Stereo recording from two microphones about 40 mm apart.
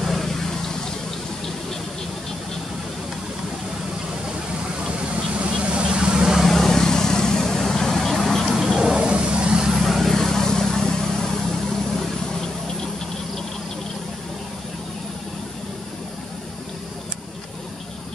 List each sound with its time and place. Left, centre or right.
0.0 s vehicle: centre
4.8 s vehicle: right
6.4 s vehicle: centre
8.7 s a sound: centre
9.1 s vehicle: right; by 10.1 s centre
10.1 s vehicle: centre